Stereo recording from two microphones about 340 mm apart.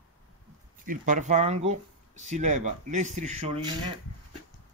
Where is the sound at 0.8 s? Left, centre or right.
Right.